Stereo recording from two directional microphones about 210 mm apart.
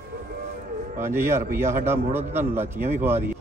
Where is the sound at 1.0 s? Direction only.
10° right (ahead or behind).